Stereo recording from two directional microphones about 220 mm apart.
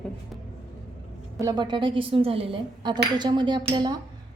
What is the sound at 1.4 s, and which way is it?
Speech, 15° right (ahead or behind).